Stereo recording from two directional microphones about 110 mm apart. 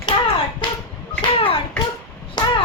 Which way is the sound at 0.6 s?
50° left (ahead or behind).